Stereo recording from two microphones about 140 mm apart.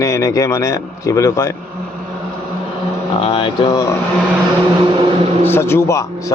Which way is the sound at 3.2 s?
40° left (ahead or behind).